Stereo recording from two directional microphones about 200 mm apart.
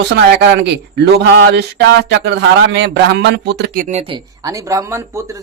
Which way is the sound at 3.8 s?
30° right (ahead or behind).